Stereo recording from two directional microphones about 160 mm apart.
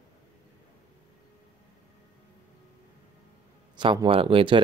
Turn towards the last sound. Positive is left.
turn(degrees=-35)  # may be behind; listen again after turning